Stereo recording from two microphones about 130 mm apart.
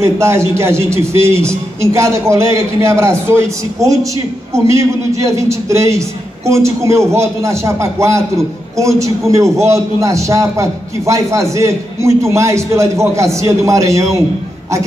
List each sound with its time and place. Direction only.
0.0 s a man's voice: 20° right (ahead or behind)